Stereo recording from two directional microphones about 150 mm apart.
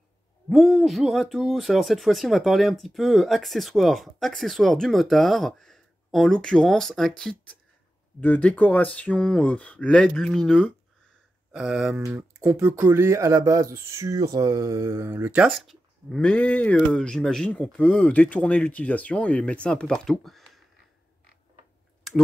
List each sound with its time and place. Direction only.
0.5 s speech: centre (ahead or behind)
15.5 s speech: centre (ahead or behind)